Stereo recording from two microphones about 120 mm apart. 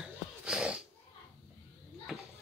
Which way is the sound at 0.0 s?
5° right (ahead or behind).